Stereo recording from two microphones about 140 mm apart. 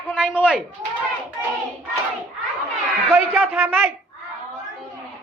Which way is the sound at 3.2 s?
Centre (ahead or behind).